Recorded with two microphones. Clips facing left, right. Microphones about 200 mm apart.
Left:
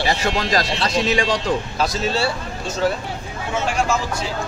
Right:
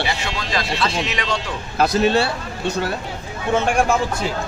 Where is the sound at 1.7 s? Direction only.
60° right (ahead or behind).